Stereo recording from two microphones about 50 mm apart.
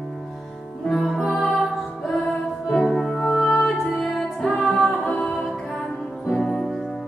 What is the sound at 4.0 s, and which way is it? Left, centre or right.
Music, centre.